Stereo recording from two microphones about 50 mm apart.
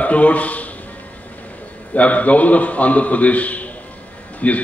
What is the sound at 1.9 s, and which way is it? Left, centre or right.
A man's voice, left.